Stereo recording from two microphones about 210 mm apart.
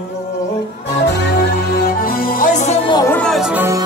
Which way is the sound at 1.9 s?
45° left (ahead or behind).